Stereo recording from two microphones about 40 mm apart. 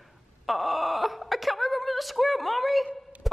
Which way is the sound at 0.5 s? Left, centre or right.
Centre.